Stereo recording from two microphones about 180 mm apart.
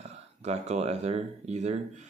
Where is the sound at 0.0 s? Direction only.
35° right (ahead or behind).